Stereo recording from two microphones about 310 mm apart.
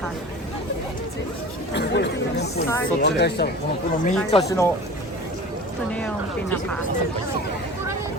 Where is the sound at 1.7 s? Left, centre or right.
Left.